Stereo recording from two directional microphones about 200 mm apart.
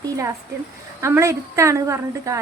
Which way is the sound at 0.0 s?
15° right (ahead or behind).